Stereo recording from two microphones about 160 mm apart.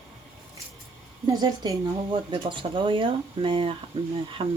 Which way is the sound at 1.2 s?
25° right (ahead or behind).